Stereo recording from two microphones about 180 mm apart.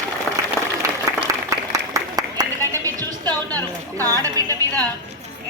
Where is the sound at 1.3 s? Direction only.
20° right (ahead or behind).